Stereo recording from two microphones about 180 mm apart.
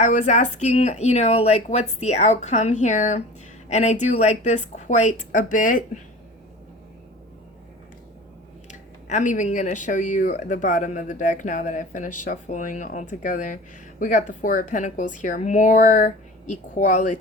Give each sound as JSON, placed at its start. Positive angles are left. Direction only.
{"t": 0.0, "sound": "speech", "side_deg": 40}
{"t": 8.6, "sound": "speech", "side_deg": 40}